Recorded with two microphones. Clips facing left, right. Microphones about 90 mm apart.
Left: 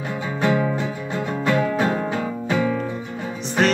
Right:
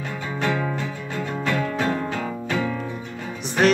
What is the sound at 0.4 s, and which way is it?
Music, 20° left (ahead or behind).